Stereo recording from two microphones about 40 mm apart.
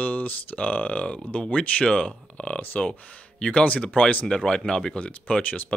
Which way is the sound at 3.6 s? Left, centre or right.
Left.